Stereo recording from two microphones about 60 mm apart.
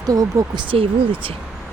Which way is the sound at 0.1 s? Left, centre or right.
Right.